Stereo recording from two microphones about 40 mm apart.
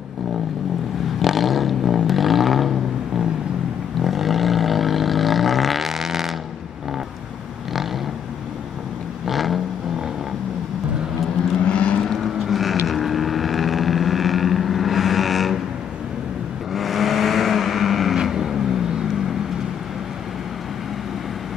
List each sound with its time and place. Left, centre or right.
1.2 s vehicle: centre
4.0 s vehicle: centre
9.2 s vehicle: centre
11.6 s vehicle: left
12.2 s mechanisms: centre
12.8 s vehicle: centre
16.7 s vehicle: centre